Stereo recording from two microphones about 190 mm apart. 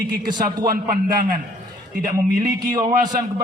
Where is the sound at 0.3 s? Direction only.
45° right (ahead or behind).